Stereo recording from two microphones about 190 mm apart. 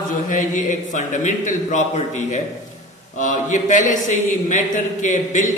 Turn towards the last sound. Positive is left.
turn(degrees=40)  # may be behind; listen again after turning